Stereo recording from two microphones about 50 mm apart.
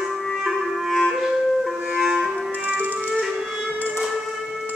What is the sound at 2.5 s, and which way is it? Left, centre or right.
Music, right.